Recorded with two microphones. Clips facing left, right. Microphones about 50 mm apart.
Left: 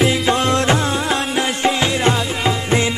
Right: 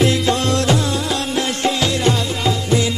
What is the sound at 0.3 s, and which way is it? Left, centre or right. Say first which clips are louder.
Music: left 1 dB; left.